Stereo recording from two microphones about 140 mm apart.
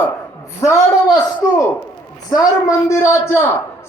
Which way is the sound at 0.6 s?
20° left (ahead or behind).